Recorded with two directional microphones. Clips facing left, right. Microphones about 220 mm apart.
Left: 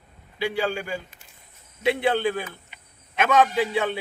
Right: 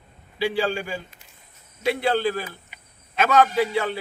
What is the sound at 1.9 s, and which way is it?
Speech, 20° left (ahead or behind).